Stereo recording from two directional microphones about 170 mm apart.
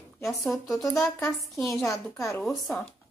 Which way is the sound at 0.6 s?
20° left (ahead or behind).